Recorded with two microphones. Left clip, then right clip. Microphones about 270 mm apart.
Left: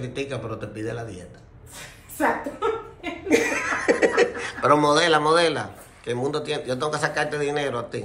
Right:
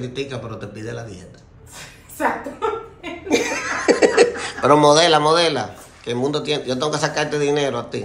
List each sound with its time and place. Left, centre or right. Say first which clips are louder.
0.0 s a man's voice: right 2 dB; centre